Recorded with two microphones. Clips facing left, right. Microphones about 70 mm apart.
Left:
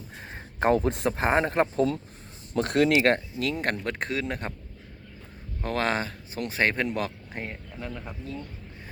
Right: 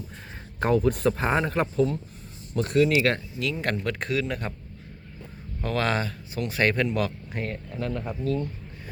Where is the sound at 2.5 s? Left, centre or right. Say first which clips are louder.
Even; left.